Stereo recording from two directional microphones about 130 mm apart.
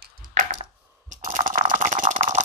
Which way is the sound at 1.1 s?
85° right.